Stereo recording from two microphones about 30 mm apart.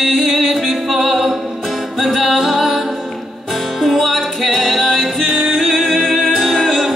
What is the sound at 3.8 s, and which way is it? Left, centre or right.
Music, centre.